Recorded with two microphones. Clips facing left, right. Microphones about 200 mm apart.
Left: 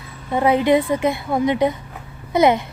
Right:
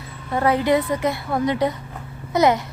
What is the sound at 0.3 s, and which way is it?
A woman's voice, 20° left (ahead or behind).